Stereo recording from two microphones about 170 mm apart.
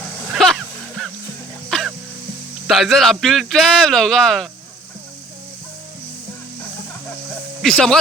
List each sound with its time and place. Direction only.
0.3 s music: centre (ahead or behind)
2.6 s a man's voice: centre (ahead or behind)
7.6 s a man's voice: 5° left (ahead or behind)